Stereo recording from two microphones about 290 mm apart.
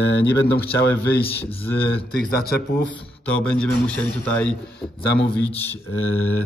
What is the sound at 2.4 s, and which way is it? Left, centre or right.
Speech, left.